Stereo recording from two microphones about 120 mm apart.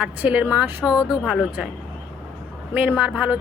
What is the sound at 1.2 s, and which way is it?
Speech, 5° right (ahead or behind).